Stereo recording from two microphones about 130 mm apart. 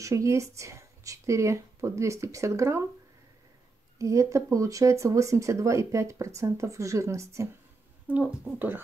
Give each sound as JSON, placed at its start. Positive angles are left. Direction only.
{"t": 0.0, "sound": "speech", "side_deg": -25}
{"t": 4.0, "sound": "speech", "side_deg": -25}